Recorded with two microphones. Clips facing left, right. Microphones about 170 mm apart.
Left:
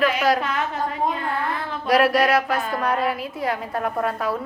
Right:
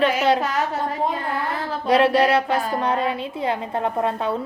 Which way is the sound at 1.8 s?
25° right (ahead or behind).